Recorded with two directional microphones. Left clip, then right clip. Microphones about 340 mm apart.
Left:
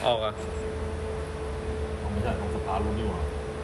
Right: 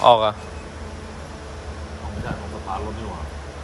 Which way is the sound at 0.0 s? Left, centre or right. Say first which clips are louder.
Right 11 dB; centre.